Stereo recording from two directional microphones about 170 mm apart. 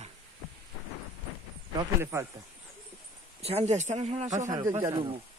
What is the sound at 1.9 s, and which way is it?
Speech, 15° right (ahead or behind).